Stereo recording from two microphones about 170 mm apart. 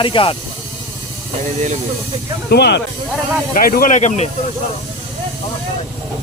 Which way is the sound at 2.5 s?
70° left (ahead or behind).